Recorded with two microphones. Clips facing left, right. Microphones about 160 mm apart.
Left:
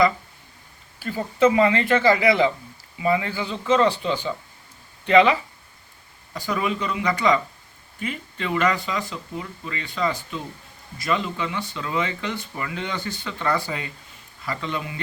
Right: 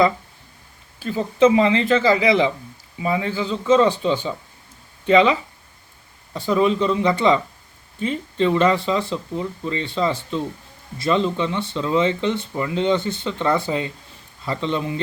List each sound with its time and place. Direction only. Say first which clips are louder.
0.9 s speech: right 4 dB; 20° right (ahead or behind)